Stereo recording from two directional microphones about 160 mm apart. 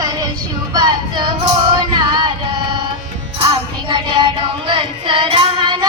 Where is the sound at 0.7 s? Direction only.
25° right (ahead or behind).